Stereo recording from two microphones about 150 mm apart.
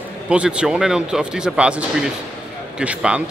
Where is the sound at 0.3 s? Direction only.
5° right (ahead or behind).